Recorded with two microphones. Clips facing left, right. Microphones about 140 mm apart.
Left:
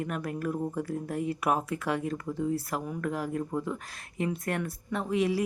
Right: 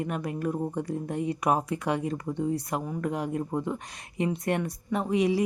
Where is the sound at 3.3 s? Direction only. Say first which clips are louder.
Right 2 dB; 25° right (ahead or behind).